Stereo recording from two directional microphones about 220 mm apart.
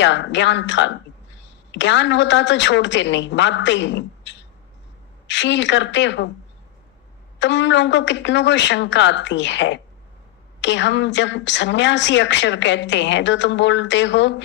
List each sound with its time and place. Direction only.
0.0 s a woman's voice: 55° left (ahead or behind)
7.3 s a woman's voice: 55° left (ahead or behind)